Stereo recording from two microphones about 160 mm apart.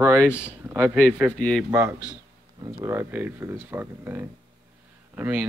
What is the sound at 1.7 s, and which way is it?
Speech, 15° right (ahead or behind).